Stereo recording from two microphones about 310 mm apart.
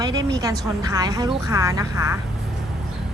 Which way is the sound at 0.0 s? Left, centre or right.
Centre.